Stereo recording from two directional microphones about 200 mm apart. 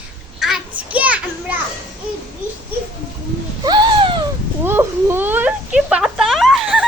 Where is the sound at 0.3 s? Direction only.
Centre (ahead or behind).